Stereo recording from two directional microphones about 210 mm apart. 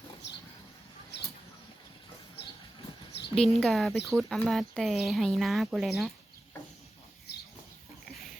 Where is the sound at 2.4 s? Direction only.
25° left (ahead or behind).